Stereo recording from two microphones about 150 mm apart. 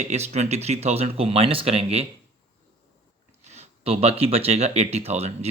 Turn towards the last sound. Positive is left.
turn(degrees=-45)  # may be behind; listen again after turning